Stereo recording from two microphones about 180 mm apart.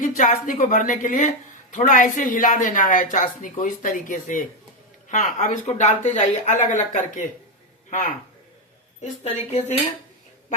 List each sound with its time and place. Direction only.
0.0 s a woman's voice: 45° left (ahead or behind)
9.5 s cutlery: 40° left (ahead or behind)